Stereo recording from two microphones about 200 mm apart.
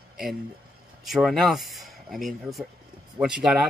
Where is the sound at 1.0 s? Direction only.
Centre (ahead or behind).